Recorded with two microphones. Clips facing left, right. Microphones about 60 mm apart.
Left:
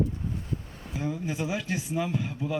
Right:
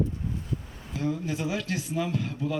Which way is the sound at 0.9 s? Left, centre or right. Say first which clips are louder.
Right 2 dB; centre.